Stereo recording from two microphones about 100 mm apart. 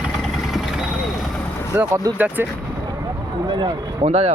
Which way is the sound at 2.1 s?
15° right (ahead or behind).